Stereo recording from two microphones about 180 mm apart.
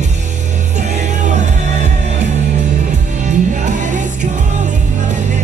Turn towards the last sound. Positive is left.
turn(degrees=-40)  # may be behind; listen again after turning